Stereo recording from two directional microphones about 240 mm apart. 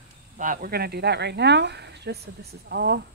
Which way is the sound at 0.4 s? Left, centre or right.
Right.